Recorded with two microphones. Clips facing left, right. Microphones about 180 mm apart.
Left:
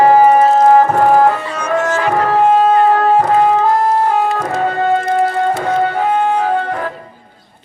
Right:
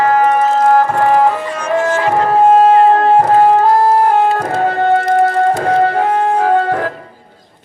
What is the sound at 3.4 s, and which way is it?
Music, 40° right (ahead or behind).